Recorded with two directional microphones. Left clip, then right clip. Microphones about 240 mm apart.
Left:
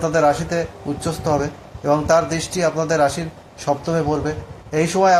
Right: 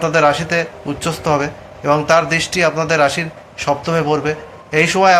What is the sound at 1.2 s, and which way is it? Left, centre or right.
Speech, centre.